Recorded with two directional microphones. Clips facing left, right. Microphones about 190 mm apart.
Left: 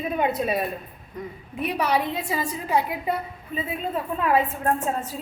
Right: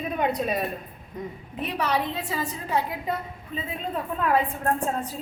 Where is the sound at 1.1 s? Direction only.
20° right (ahead or behind).